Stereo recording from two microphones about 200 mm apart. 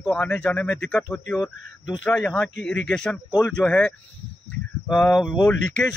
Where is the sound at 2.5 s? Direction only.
60° left (ahead or behind).